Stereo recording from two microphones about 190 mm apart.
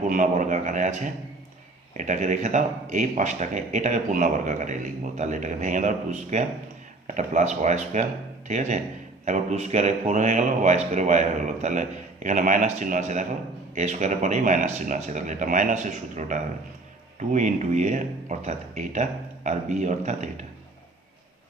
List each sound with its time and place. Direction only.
0.1 s speech: 40° right (ahead or behind)